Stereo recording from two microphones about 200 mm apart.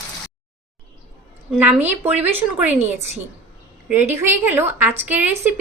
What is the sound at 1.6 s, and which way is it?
A woman's voice, 10° right (ahead or behind).